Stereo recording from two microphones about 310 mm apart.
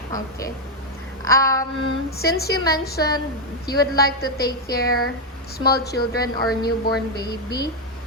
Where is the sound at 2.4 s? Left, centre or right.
Left.